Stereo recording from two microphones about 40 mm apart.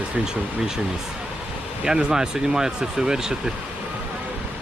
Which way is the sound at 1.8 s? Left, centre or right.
Centre.